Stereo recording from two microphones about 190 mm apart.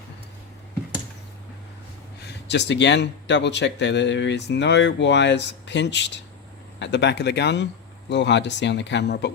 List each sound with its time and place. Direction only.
2.5 s speech: 65° left (ahead or behind)